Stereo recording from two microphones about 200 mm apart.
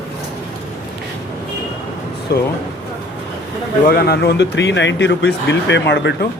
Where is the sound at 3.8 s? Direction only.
50° left (ahead or behind).